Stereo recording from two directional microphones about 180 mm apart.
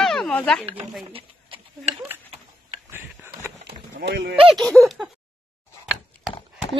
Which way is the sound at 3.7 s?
70° right (ahead or behind).